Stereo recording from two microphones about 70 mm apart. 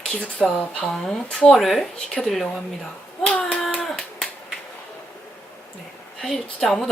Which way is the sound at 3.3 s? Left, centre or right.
Centre.